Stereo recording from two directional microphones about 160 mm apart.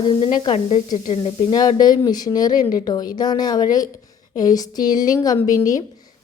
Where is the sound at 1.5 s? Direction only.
25° left (ahead or behind).